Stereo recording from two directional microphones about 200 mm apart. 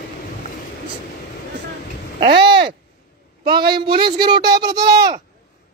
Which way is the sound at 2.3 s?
55° right (ahead or behind).